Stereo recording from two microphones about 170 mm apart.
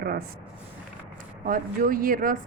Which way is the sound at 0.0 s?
60° right (ahead or behind).